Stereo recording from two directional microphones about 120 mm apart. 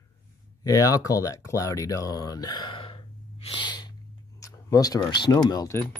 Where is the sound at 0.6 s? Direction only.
30° left (ahead or behind).